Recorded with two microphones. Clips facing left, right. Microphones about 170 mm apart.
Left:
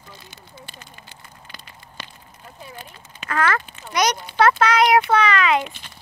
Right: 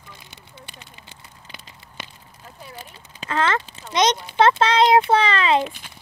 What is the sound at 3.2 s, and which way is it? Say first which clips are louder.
A child's voice: even; 25° right (ahead or behind).